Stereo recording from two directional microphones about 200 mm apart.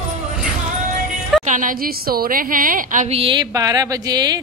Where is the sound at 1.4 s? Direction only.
40° right (ahead or behind).